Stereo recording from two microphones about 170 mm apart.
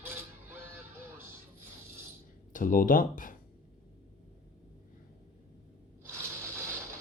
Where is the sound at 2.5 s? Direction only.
50° left (ahead or behind).